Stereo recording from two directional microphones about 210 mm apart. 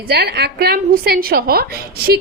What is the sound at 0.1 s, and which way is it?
A woman's voice, 50° right (ahead or behind).